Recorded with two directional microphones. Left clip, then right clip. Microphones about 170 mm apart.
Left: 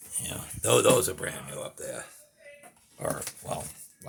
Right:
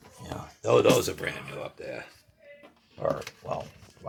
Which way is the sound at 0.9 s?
10° left (ahead or behind).